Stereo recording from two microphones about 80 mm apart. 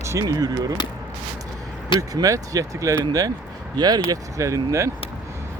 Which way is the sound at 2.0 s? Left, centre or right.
Right.